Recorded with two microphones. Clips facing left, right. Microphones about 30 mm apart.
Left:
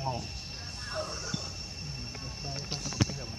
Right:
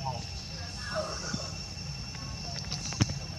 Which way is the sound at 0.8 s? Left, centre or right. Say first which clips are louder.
Right 2 dB; centre.